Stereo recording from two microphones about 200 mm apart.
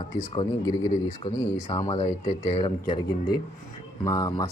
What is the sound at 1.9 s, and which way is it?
Speech, 35° left (ahead or behind).